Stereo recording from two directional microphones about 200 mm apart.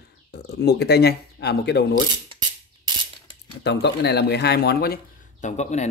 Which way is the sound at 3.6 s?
55° left (ahead or behind).